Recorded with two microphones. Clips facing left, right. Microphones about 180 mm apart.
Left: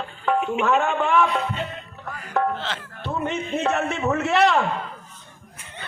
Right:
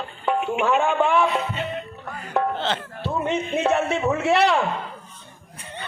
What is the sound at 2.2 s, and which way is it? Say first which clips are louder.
Music: even; 30° right (ahead or behind).